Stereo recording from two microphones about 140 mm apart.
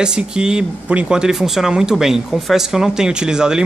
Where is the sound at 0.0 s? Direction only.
5° right (ahead or behind).